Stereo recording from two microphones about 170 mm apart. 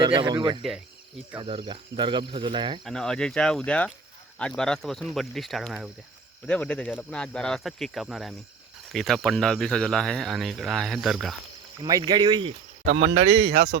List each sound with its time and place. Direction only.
0.0 s speech: 25° right (ahead or behind)
2.8 s speech: 5° left (ahead or behind)
11.8 s speech: 25° right (ahead or behind)
12.8 s speech: 65° right (ahead or behind)
13.1 s speech: 35° right (ahead or behind)
13.5 s speech: 70° right (ahead or behind)